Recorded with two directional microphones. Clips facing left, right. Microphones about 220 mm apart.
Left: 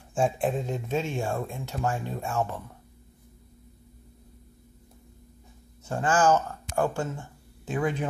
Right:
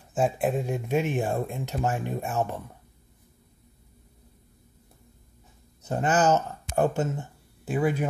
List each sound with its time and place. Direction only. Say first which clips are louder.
0.1 s speech: right 1 dB; 5° right (ahead or behind)
5.9 s speech: even; 20° right (ahead or behind)
7.6 s speech: right 3 dB; 10° right (ahead or behind)